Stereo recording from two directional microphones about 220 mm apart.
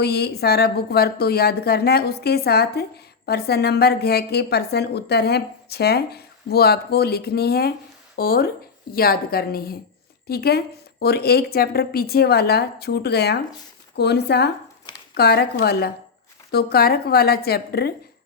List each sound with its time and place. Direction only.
0.0 s a woman's voice: 45° left (ahead or behind)